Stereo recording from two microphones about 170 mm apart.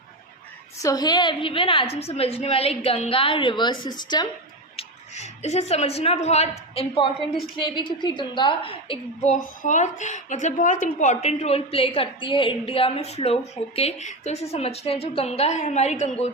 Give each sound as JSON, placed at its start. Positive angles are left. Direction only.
{"t": 0.8, "sound": "a woman's voice", "side_deg": 20}
{"t": 4.8, "sound": "a woman's voice", "side_deg": 40}